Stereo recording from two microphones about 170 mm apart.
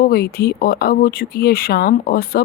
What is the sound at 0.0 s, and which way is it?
Speech, 60° left (ahead or behind).